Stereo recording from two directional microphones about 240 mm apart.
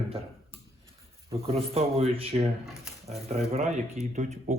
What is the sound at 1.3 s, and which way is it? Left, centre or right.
Speech, right.